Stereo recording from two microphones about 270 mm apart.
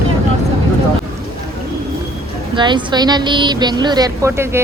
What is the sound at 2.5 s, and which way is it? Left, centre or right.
Speech, centre.